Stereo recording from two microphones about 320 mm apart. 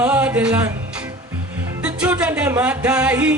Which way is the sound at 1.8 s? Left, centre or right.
Centre.